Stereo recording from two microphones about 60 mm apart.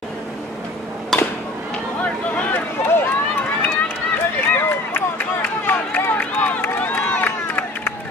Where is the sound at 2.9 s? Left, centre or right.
Left.